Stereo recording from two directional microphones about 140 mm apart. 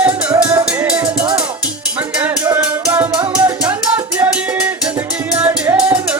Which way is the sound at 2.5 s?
15° right (ahead or behind).